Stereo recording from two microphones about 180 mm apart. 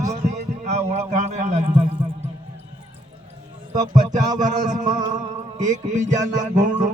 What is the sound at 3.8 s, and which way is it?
Music, 20° right (ahead or behind).